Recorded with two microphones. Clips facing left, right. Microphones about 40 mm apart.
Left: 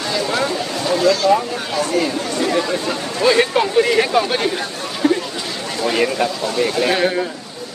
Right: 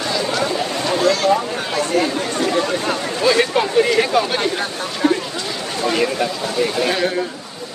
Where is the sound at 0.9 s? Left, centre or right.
Right.